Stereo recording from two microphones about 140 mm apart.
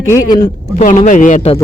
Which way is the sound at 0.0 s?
20° left (ahead or behind).